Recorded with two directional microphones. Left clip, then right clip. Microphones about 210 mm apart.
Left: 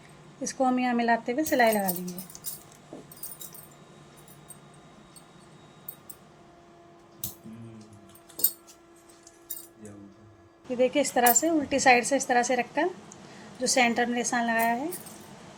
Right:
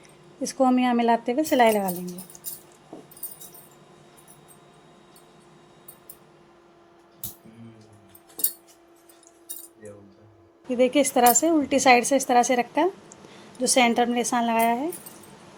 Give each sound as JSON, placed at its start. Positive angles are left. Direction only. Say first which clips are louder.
{"t": 0.4, "sound": "speech", "louder": "right 4 dB", "side_deg": -25}
{"t": 10.7, "sound": "a woman's voice", "louder": "right 4 dB", "side_deg": -35}